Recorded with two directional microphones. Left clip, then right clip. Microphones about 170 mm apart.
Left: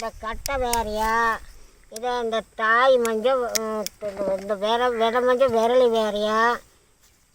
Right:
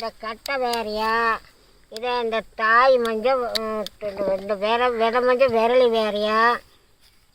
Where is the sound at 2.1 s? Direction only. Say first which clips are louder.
Right 2 dB; 10° right (ahead or behind).